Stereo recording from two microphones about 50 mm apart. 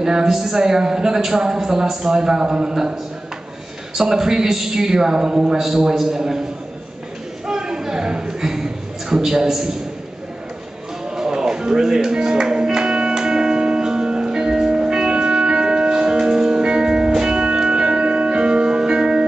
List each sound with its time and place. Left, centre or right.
0.0 s a woman's voice: centre
7.4 s a sound: centre
9.1 s a woman's voice: centre
11.1 s music: centre